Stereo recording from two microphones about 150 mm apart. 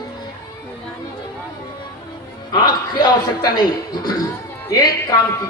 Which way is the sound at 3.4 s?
25° left (ahead or behind).